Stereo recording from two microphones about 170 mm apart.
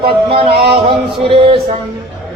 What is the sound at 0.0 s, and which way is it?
Music, 30° right (ahead or behind).